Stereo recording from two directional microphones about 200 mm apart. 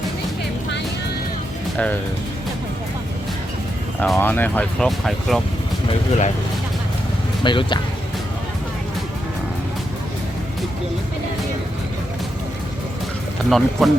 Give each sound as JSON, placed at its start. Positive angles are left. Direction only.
{"t": 4.0, "sound": "speech", "side_deg": 5}
{"t": 5.9, "sound": "speech", "side_deg": 35}
{"t": 7.4, "sound": "speech", "side_deg": 25}
{"t": 13.5, "sound": "speech", "side_deg": 0}